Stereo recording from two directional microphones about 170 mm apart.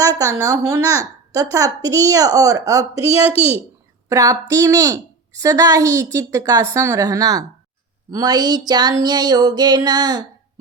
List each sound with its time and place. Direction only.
0.0 s a woman's voice: 20° right (ahead or behind)
3.3 s a woman's voice: 35° left (ahead or behind)
4.1 s a woman's voice: 20° right (ahead or behind)